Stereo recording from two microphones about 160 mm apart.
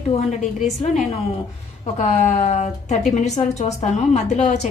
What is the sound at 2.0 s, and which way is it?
A woman's voice, 40° left (ahead or behind).